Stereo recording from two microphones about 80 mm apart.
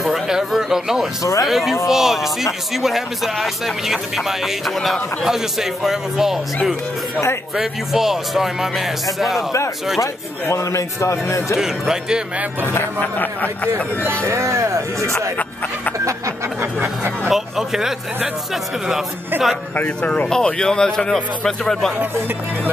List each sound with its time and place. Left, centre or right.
0.0 s a sound: centre
1.2 s speech: left
1.5 s speech: centre
7.5 s speech: centre
10.5 s a man's voice: left
11.5 s speech: centre
12.6 s speech: left
14.2 s speech: right
16.8 s speech: right
17.3 s speech: centre
19.3 s speech: right
19.7 s speech: centre